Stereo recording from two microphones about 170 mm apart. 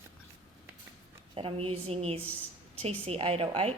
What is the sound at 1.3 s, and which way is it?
Speech, 35° right (ahead or behind).